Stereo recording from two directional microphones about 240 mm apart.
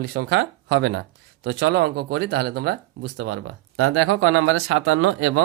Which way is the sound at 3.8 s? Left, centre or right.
Right.